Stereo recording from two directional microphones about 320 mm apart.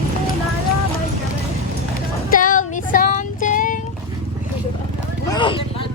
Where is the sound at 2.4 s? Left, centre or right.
Left.